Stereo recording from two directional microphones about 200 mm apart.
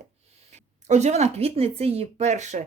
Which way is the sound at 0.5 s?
35° right (ahead or behind).